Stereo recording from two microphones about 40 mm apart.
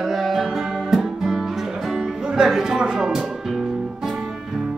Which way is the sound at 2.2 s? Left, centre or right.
Right.